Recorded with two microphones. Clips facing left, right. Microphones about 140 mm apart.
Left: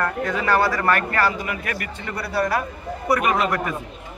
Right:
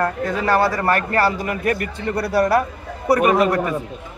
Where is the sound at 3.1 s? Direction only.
35° right (ahead or behind).